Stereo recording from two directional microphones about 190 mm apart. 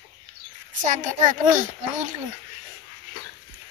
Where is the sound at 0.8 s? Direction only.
40° right (ahead or behind).